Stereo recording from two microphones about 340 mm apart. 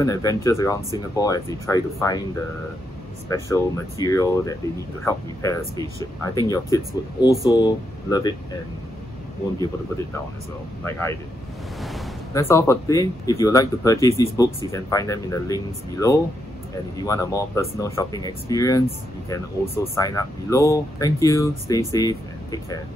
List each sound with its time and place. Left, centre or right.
0.0 s speech: centre
3.3 s speech: centre
10.8 s speech: centre